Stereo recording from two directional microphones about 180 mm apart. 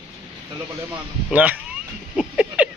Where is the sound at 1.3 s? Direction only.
10° right (ahead or behind).